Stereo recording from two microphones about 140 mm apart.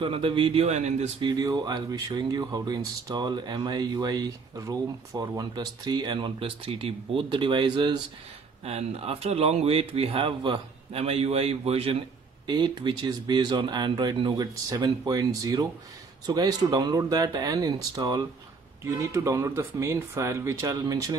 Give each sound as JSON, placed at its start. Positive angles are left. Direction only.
{"t": 0.0, "sound": "speech", "side_deg": -40}
{"t": 1.2, "sound": "speech", "side_deg": -30}
{"t": 8.6, "sound": "speech", "side_deg": -45}
{"t": 12.4, "sound": "speech", "side_deg": -30}